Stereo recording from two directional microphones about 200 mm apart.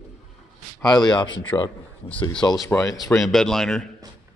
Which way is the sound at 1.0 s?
20° left (ahead or behind).